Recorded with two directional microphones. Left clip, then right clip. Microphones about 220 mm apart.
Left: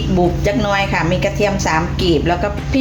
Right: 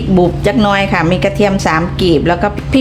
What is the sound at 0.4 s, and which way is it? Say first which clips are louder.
A woman's voice: right 4 dB; 45° right (ahead or behind).